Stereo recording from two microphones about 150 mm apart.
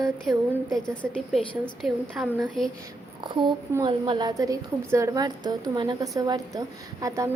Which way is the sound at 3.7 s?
30° right (ahead or behind).